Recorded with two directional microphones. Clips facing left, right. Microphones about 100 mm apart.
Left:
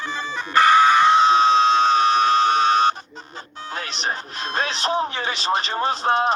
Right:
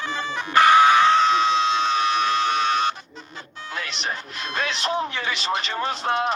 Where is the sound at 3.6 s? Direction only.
35° left (ahead or behind).